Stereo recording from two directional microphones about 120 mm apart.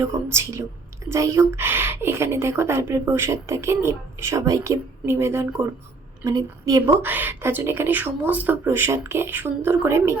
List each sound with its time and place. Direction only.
0.0 s speech: 20° right (ahead or behind)